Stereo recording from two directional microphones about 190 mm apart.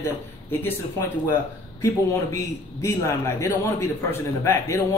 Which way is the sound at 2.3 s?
15° left (ahead or behind).